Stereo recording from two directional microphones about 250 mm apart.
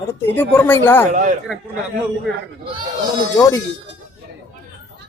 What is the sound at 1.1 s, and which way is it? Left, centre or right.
Speech, right.